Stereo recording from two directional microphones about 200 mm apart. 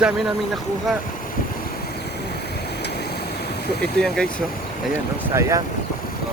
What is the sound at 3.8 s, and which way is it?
Speech, 5° left (ahead or behind).